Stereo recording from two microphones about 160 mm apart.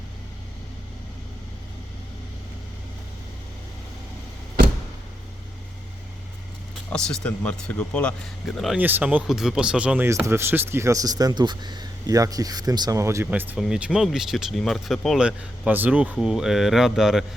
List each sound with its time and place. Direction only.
7.2 s speech: 10° left (ahead or behind)
8.8 s speech: 10° right (ahead or behind)